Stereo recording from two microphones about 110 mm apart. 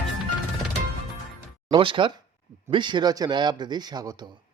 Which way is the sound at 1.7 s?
50° right (ahead or behind).